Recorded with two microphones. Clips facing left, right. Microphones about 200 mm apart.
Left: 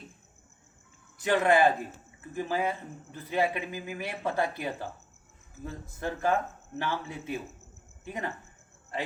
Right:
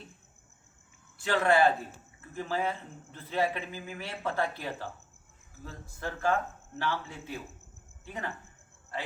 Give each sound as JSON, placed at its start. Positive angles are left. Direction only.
{"t": 1.2, "sound": "speech", "side_deg": 20}